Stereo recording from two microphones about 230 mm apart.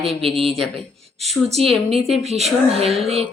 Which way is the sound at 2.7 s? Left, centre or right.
Right.